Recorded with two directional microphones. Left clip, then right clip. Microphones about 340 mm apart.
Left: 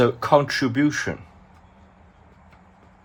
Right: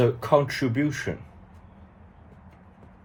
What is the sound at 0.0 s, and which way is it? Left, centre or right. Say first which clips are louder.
Speech: left 3 dB; centre.